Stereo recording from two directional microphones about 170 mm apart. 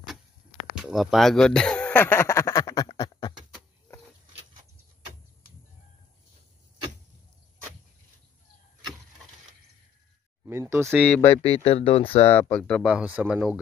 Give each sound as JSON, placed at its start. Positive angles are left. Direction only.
{"t": 0.7, "sound": "quack", "side_deg": 0}
{"t": 10.4, "sound": "a sound", "side_deg": -15}
{"t": 11.3, "sound": "speech", "side_deg": 35}
{"t": 12.3, "sound": "speech", "side_deg": 10}